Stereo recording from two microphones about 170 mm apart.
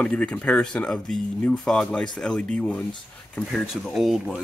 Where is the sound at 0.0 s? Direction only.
5° left (ahead or behind).